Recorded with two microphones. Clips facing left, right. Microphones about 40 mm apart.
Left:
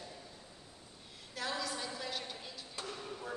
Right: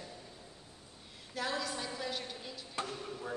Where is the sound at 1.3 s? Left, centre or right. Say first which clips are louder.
Right 2 dB; centre.